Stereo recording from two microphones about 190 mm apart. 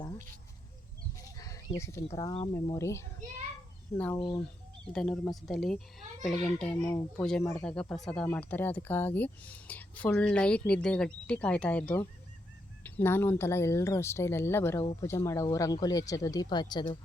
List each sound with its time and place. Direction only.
1.4 s speech: 20° left (ahead or behind)
4.2 s speech: 25° left (ahead or behind)
4.9 s speech: 5° left (ahead or behind); by 16.8 s 25° left (ahead or behind)